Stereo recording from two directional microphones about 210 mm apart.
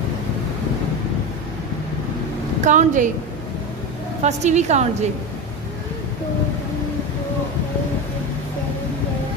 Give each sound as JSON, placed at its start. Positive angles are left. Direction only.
{"t": 2.6, "sound": "a woman's voice", "side_deg": -35}
{"t": 4.2, "sound": "a woman's voice", "side_deg": -35}